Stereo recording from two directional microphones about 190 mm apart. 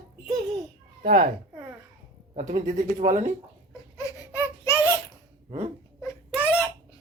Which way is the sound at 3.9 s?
15° left (ahead or behind).